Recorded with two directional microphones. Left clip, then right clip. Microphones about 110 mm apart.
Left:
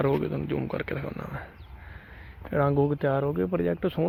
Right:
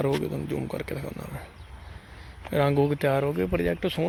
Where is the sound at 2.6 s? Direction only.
10° right (ahead or behind).